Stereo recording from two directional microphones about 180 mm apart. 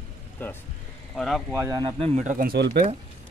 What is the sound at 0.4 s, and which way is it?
Speech, 10° left (ahead or behind).